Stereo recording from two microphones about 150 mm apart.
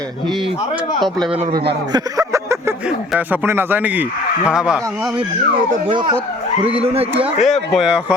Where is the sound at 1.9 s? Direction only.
20° right (ahead or behind).